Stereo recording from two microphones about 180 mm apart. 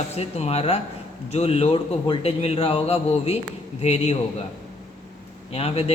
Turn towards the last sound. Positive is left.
turn(degrees=35)  # may be behind; listen again after turning